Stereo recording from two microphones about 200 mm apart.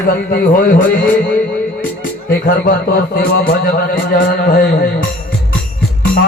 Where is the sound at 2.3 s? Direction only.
45° left (ahead or behind).